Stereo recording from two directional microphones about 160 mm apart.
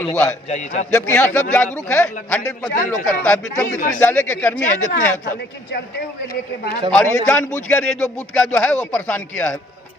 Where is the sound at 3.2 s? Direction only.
10° left (ahead or behind).